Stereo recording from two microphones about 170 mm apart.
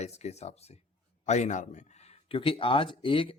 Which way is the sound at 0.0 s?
40° left (ahead or behind).